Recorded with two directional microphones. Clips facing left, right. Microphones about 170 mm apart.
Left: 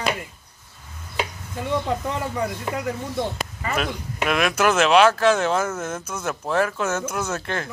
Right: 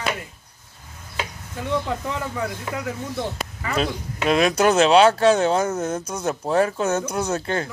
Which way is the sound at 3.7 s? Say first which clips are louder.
Right 2 dB; 30° right (ahead or behind).